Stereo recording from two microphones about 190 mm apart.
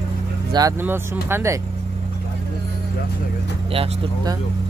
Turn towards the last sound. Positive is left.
turn(degrees=-25)  # may be behind; listen again after turning